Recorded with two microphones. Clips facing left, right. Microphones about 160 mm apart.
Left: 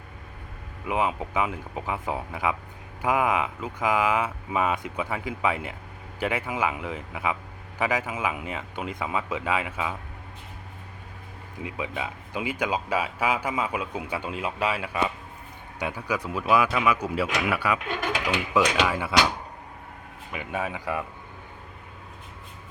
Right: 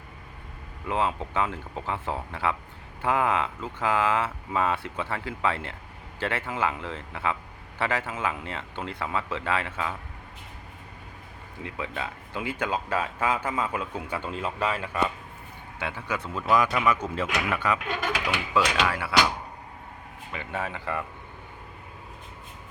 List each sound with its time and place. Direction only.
0.9 s speech: 10° left (ahead or behind)
11.6 s speech: 15° left (ahead or behind)
20.3 s speech: 15° left (ahead or behind)